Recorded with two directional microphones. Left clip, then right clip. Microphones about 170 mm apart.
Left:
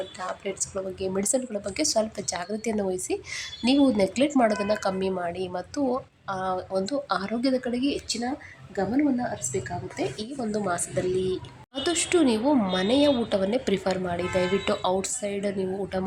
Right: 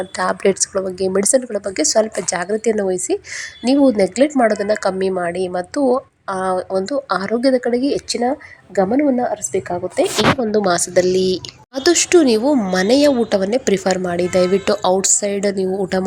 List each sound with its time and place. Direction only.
0.2 s a woman's voice: 55° right (ahead or behind)
0.7 s speech: 40° right (ahead or behind)
8.7 s a woman's voice: 50° right (ahead or behind)
10.7 s speech: 35° right (ahead or behind)